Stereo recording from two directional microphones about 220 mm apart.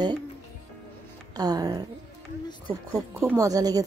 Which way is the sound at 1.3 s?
15° right (ahead or behind).